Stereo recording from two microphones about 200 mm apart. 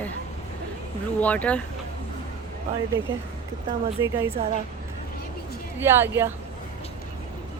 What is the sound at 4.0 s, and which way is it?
Speech, 15° right (ahead or behind).